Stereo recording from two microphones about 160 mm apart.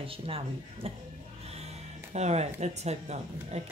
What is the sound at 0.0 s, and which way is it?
Speech, 35° right (ahead or behind).